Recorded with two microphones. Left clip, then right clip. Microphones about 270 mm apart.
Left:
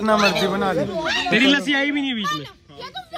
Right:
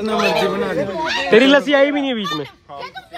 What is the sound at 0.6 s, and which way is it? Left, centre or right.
Speech, left.